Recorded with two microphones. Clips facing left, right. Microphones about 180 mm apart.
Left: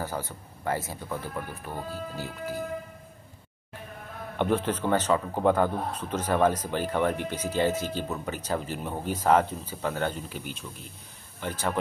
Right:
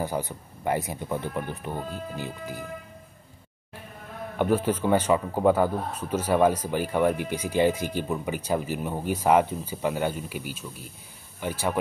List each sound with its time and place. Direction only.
0.0 s a man's voice: 15° right (ahead or behind)
4.4 s a man's voice: 10° right (ahead or behind)